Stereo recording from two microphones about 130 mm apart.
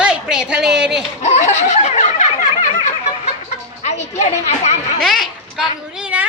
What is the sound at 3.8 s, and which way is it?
Children playing, 60° left (ahead or behind).